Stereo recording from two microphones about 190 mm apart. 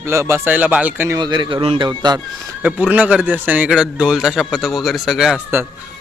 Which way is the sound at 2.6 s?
10° right (ahead or behind).